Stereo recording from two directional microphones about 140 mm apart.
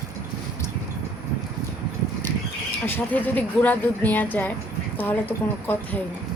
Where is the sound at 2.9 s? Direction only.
15° left (ahead or behind).